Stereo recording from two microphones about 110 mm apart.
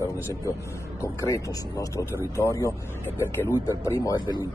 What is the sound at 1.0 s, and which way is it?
A man's voice, 30° left (ahead or behind).